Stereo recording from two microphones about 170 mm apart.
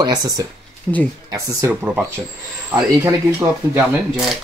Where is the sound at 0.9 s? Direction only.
5° left (ahead or behind).